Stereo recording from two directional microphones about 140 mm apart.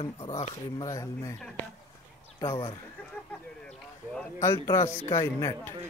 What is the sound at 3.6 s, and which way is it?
Speech, 5° left (ahead or behind).